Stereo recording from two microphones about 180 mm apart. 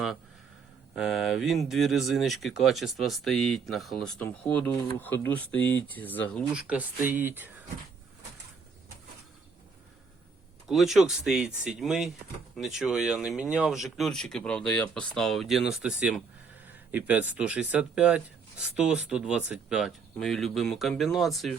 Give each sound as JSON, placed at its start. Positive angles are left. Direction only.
{"t": 0.9, "sound": "speech", "side_deg": -5}
{"t": 6.5, "sound": "speech", "side_deg": -5}
{"t": 10.7, "sound": "speech", "side_deg": 0}